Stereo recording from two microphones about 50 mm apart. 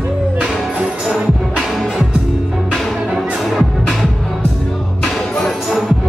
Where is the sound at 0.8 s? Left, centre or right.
Centre.